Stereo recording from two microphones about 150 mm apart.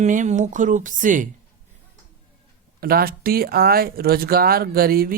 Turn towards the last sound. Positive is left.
turn(degrees=-80)